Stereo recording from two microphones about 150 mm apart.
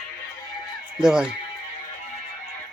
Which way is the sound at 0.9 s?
5° right (ahead or behind).